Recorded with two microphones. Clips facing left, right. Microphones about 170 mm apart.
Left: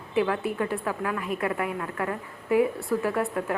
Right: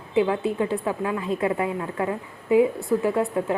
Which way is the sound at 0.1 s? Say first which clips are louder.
Right 4 dB; 20° right (ahead or behind).